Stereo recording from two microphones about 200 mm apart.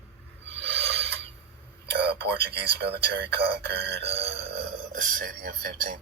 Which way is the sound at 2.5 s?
55° right (ahead or behind).